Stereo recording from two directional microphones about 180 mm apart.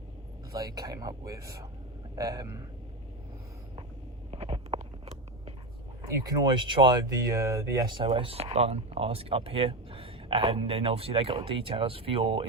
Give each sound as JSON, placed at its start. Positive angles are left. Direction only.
{"t": 0.5, "sound": "speech", "side_deg": -20}
{"t": 4.3, "sound": "biting", "side_deg": -30}
{"t": 6.1, "sound": "speech", "side_deg": -20}